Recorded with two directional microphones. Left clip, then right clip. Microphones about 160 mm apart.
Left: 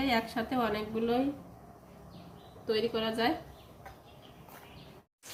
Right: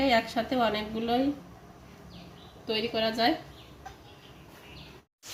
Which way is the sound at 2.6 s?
55° right (ahead or behind).